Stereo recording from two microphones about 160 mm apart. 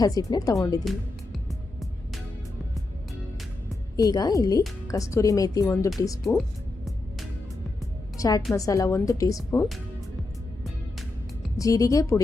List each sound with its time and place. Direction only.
0.0 s a woman's voice: 25° left (ahead or behind)
0.9 s music: centre (ahead or behind)
3.9 s a woman's voice: 25° left (ahead or behind)
8.2 s a woman's voice: 20° left (ahead or behind)
11.5 s a woman's voice: 20° left (ahead or behind)